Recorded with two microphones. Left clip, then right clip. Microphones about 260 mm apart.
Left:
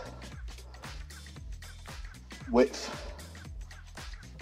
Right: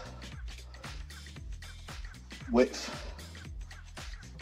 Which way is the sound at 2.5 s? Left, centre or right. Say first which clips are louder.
Left 2 dB; left.